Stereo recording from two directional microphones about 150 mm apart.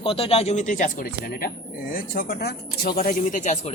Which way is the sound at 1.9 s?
80° left.